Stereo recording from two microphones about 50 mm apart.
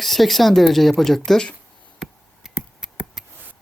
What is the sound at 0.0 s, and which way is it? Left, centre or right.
Speech, centre.